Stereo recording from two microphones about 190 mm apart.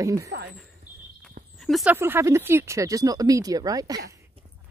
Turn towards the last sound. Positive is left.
turn(degrees=-20)  # may be behind; listen again after turning